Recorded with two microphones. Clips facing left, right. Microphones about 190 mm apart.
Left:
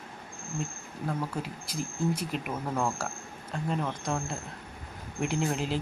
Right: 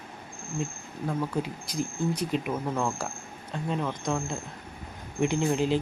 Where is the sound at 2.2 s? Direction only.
5° left (ahead or behind).